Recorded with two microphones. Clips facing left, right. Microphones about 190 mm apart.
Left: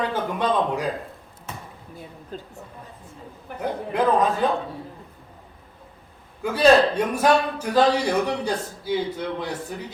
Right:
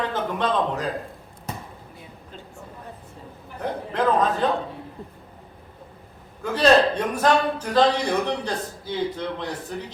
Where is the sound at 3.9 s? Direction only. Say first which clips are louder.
Left 1 dB; 10° left (ahead or behind).